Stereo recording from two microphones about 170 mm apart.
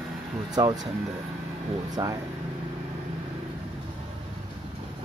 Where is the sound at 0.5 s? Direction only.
25° right (ahead or behind).